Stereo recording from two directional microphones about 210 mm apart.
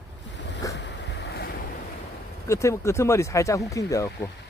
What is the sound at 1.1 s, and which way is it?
Waves, 55° left (ahead or behind).